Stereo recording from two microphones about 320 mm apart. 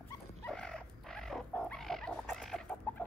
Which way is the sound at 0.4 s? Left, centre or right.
Centre.